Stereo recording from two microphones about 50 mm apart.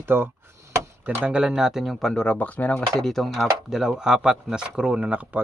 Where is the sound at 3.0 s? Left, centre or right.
Centre.